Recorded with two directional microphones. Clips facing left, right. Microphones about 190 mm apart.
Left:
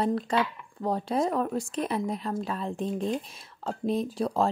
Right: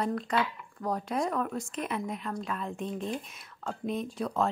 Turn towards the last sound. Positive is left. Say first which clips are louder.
# left 4 dB
turn(degrees=30)  # may be behind; listen again after turning